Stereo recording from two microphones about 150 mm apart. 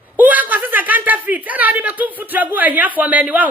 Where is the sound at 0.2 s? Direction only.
10° right (ahead or behind).